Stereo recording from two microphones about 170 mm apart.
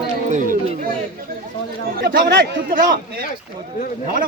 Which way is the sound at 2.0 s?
60° right (ahead or behind).